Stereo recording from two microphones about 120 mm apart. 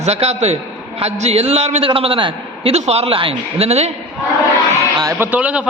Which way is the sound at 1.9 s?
45° right (ahead or behind).